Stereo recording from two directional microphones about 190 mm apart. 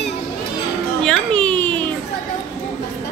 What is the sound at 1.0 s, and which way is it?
Speech, 5° left (ahead or behind).